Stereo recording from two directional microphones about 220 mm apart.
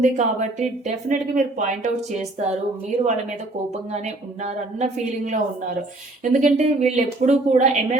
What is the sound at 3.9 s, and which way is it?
Speech, 30° right (ahead or behind).